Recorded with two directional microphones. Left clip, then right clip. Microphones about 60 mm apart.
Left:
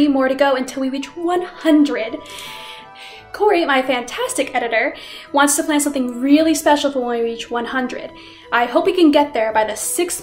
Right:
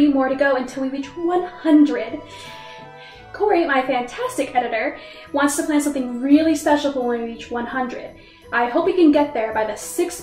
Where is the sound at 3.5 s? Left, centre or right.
Left.